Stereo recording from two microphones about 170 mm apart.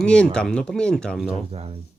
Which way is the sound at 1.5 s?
35° right (ahead or behind).